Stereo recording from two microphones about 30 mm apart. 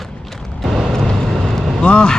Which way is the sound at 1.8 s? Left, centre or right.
Left.